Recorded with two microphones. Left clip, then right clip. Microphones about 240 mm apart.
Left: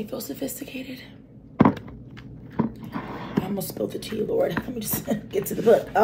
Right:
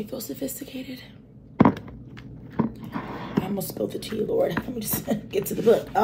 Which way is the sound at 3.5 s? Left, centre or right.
Centre.